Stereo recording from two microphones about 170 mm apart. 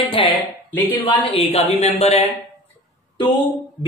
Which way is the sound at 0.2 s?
30° left (ahead or behind).